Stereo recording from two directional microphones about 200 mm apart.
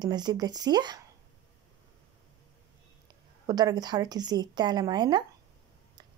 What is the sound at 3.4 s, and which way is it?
A woman's voice, 20° right (ahead or behind).